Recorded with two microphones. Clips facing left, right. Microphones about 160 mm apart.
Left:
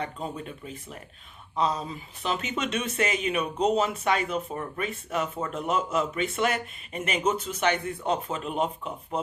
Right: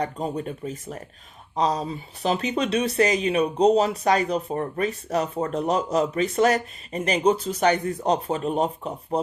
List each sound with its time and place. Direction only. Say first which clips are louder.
0.0 s speech: right 6 dB; 40° right (ahead or behind)